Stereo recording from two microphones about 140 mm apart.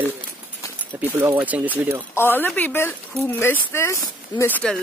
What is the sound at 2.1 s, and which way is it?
A woman's voice, 15° left (ahead or behind).